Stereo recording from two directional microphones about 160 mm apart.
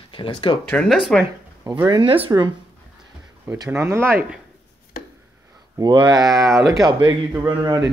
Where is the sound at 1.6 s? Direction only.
15° right (ahead or behind).